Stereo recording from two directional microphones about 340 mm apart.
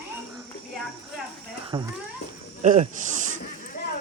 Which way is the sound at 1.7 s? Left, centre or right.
Centre.